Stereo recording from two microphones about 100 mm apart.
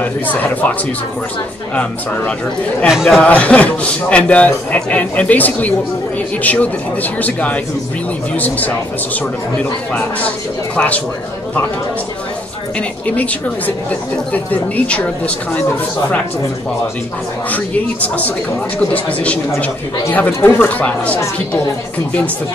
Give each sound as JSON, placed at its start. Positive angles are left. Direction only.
{"t": 0.0, "sound": "a man's voice", "side_deg": 15}
{"t": 2.9, "sound": "speech", "side_deg": -5}
{"t": 3.2, "sound": "a man's voice", "side_deg": 15}
{"t": 13.1, "sound": "a man's voice", "side_deg": 15}
{"t": 18.0, "sound": "a man's voice", "side_deg": 15}
{"t": 20.1, "sound": "a man's voice", "side_deg": 15}